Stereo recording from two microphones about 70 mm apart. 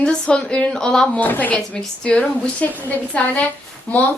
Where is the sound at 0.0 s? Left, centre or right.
Centre.